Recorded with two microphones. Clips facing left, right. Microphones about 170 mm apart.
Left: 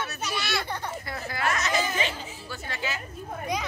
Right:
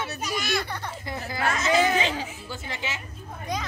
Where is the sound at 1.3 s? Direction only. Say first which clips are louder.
Right 4 dB; 25° right (ahead or behind).